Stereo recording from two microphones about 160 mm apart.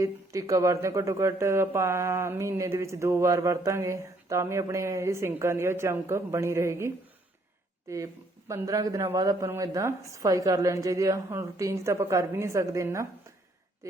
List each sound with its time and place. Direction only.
0.0 s a man's voice: 20° right (ahead or behind)